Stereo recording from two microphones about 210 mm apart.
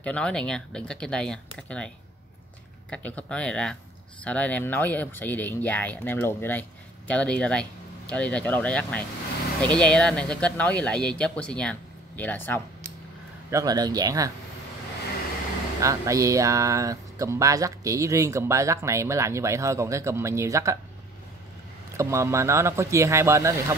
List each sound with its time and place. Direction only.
0.0 s speech: 5° left (ahead or behind)
2.9 s speech: 5° left (ahead or behind)
13.5 s speech: 15° right (ahead or behind)
15.8 s speech: 15° right (ahead or behind)
21.9 s speech: 15° right (ahead or behind)